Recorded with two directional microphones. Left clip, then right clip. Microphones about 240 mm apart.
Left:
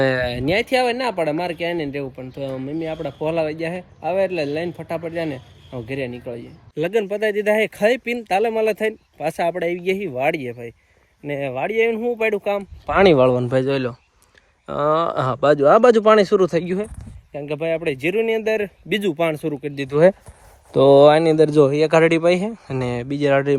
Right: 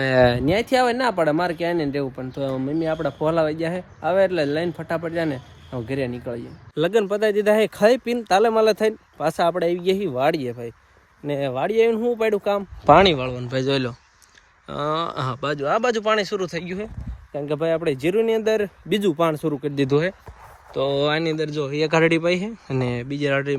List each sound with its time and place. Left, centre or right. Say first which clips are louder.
0.3 s speech: left 1 dB; centre
7.3 s speech: even; right
8.4 s speech: right 2 dB; centre
13.0 s speech: left 5 dB; centre
17.3 s speech: even; centre
20.9 s speech: left 11 dB; centre